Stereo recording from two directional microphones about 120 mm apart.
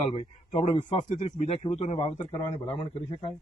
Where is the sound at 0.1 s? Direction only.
50° left (ahead or behind).